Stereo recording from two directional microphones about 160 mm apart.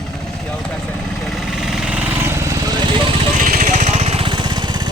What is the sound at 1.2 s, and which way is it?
Vehicle, centre (ahead or behind).